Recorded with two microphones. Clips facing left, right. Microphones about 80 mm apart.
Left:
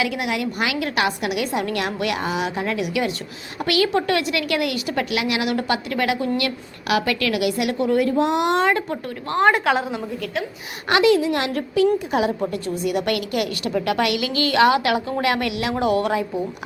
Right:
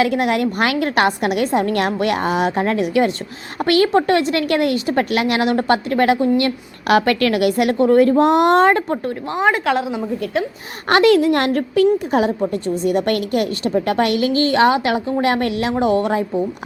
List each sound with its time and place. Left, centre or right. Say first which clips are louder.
0.0 s a woman's voice: right 7 dB; right
6.9 s a woman's voice: right 6 dB; right
9.4 s a woman's voice: even; centre
10.8 s a woman's voice: right 4 dB; right
12.5 s a woman's voice: right 5 dB; right